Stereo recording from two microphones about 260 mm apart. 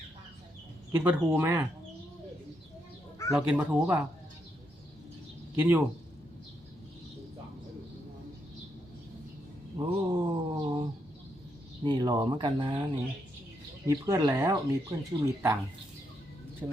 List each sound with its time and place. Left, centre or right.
0.9 s speech: centre
3.3 s speech: centre
5.5 s speech: centre
9.7 s mantra: centre
11.8 s speech: centre